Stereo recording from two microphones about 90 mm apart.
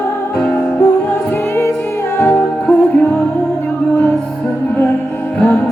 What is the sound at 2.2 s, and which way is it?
Music, 25° left (ahead or behind).